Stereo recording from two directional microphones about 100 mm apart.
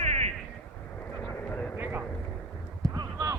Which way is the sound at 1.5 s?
15° left (ahead or behind).